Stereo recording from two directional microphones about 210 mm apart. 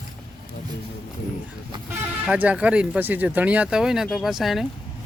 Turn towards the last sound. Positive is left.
turn(degrees=0)  # may be behind; listen again after turning